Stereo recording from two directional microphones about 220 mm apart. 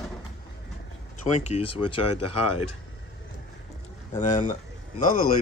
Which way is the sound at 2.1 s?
90° left.